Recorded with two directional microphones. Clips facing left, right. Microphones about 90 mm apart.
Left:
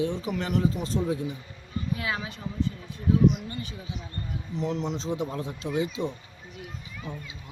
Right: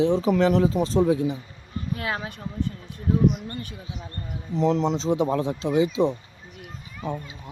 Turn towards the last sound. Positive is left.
turn(degrees=-45)  # may be behind; listen again after turning